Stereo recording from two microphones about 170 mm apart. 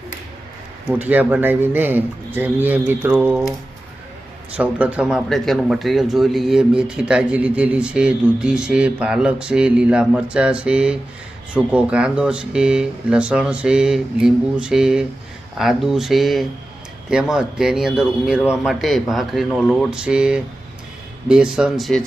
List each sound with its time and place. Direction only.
0.9 s speech: 10° right (ahead or behind)
4.5 s speech: 5° right (ahead or behind)